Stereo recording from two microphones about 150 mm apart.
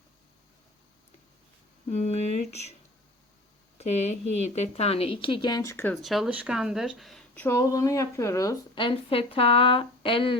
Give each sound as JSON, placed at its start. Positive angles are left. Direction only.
{"t": 1.9, "sound": "speech", "side_deg": 45}
{"t": 3.8, "sound": "speech", "side_deg": 45}
{"t": 5.9, "sound": "speech", "side_deg": 0}
{"t": 7.4, "sound": "speech", "side_deg": 20}
{"t": 8.7, "sound": "speech", "side_deg": 35}